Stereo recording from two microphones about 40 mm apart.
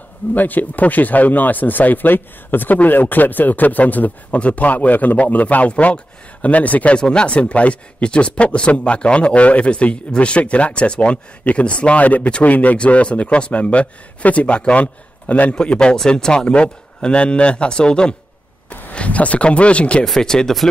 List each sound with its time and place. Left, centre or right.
0.3 s a man's voice: left
7.0 s speech: left
7.3 s a man's voice: left
12.7 s a man's voice: left
15.5 s speech: left
18.9 s a man's voice: left
20.2 s speech: centre